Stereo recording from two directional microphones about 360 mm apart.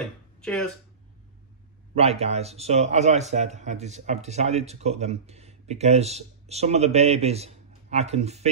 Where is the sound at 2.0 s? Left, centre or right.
Centre.